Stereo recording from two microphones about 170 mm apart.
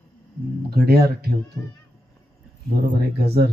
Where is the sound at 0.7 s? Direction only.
65° right (ahead or behind).